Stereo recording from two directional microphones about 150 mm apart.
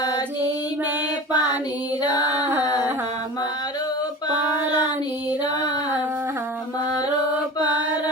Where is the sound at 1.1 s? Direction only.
25° left (ahead or behind).